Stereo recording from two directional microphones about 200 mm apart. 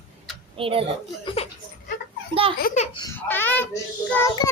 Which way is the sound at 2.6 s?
40° left (ahead or behind).